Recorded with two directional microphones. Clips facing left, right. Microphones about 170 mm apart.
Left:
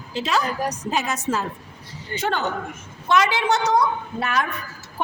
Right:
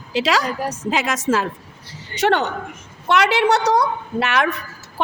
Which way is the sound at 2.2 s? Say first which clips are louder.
Right 6 dB; 70° right (ahead or behind).